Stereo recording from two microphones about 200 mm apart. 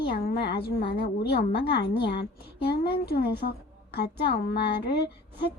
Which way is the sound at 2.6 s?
50° left (ahead or behind).